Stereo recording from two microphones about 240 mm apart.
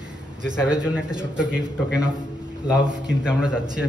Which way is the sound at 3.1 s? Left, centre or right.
Centre.